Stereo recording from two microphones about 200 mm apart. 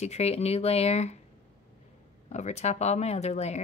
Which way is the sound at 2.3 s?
35° left (ahead or behind).